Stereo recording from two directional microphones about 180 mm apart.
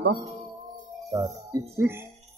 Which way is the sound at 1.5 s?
15° right (ahead or behind).